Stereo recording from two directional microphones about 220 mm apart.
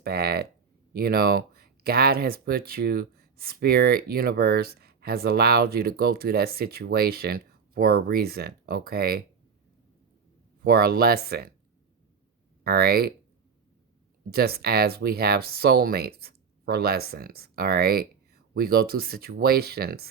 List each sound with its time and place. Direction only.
0.0 s speech: 45° right (ahead or behind)
10.6 s speech: 45° right (ahead or behind)
12.6 s speech: 45° right (ahead or behind)
14.3 s speech: 45° right (ahead or behind)